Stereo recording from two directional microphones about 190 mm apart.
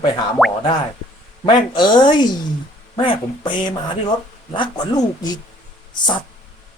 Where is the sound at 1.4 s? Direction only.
25° left (ahead or behind).